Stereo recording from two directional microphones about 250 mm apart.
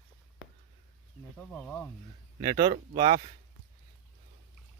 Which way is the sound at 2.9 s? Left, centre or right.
Right.